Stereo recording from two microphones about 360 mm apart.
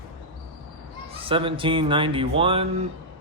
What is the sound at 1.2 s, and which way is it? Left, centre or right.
Speech, centre.